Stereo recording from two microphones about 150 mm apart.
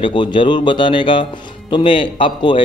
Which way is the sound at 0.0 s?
30° left (ahead or behind).